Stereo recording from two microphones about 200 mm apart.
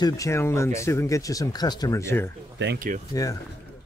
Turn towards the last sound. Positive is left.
turn(degrees=-40)  # may be behind; listen again after turning